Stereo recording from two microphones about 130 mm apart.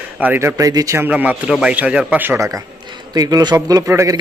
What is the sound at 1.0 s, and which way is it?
Speech, 10° right (ahead or behind).